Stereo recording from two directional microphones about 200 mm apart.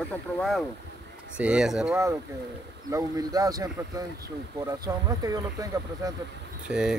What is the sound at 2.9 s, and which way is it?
Speech, 15° right (ahead or behind).